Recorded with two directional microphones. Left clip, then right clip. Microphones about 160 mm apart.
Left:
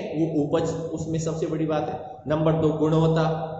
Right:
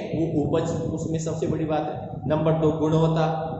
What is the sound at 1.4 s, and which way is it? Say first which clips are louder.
A man's voice: even; 15° left (ahead or behind).